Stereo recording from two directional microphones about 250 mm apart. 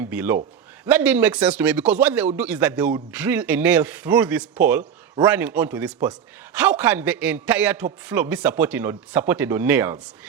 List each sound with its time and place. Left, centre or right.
0.0 s a man's voice: centre